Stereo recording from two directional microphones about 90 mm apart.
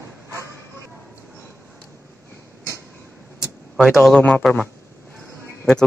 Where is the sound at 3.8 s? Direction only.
5° right (ahead or behind).